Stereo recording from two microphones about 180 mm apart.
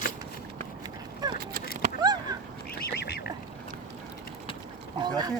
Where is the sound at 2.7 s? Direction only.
65° left (ahead or behind).